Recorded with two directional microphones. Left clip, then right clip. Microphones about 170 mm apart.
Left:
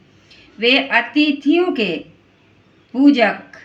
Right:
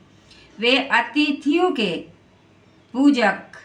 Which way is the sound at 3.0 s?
20° right (ahead or behind).